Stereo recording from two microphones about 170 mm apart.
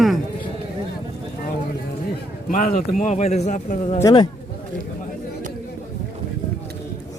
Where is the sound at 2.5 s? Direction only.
50° left (ahead or behind).